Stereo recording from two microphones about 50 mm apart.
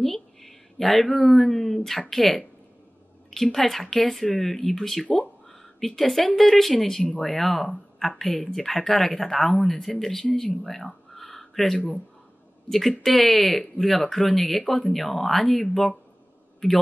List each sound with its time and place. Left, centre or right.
0.0 s speech: centre
3.5 s speech: centre
5.0 s speech: left
5.5 s a sound: centre
6.3 s speech: centre